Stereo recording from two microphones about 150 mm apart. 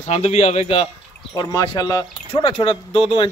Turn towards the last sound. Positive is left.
turn(degrees=35)  # may be behind; listen again after turning